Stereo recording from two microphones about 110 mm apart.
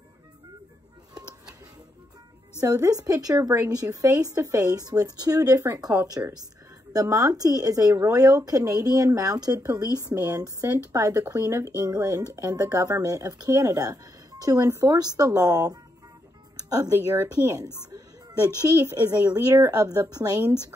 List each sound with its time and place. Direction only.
2.6 s speech: 30° right (ahead or behind)